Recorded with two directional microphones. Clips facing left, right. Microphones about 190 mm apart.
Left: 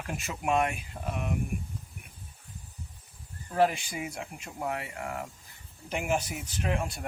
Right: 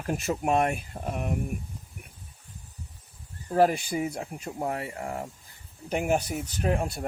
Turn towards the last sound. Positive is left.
turn(degrees=-35)  # may be behind; listen again after turning